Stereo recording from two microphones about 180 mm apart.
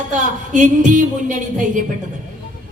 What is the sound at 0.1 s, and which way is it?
A woman's voice, 45° right (ahead or behind).